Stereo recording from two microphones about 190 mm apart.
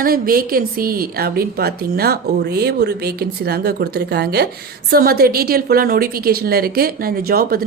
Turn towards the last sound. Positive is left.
turn(degrees=-50)  # may be behind; listen again after turning